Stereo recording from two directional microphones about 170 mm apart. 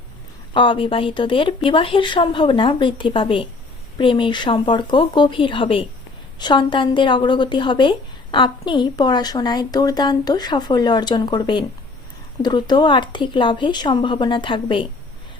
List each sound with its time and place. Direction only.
0.5 s a woman's voice: 30° left (ahead or behind)